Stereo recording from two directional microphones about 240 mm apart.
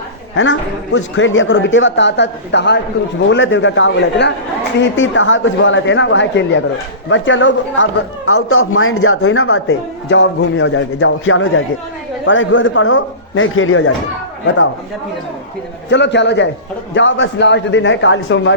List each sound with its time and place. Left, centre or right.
0.9 s speech: left
15.9 s speech: left